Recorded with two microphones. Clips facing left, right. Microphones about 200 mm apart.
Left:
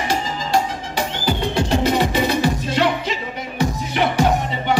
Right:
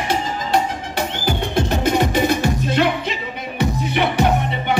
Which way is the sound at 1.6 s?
50° right (ahead or behind).